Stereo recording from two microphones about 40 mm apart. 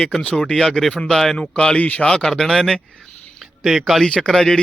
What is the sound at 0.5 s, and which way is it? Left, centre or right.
Speech, centre.